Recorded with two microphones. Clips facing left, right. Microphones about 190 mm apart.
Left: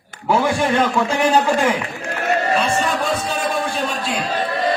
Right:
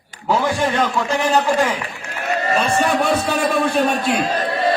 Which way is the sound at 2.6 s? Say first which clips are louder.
Right 2 dB; 65° right (ahead or behind).